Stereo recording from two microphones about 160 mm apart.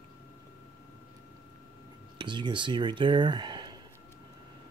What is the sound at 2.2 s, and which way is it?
Speech, 30° right (ahead or behind).